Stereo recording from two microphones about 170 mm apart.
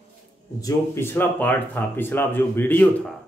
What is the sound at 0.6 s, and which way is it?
Speech, 15° left (ahead or behind).